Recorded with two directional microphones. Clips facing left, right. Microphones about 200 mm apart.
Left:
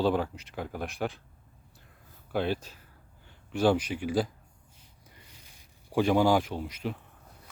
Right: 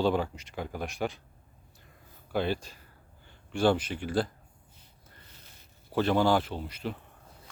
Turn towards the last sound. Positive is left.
turn(degrees=5)  # may be behind; listen again after turning